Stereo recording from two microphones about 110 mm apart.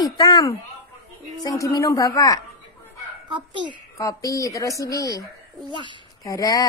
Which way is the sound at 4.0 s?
30° left (ahead or behind).